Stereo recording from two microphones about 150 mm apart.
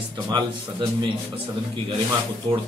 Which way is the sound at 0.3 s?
30° right (ahead or behind).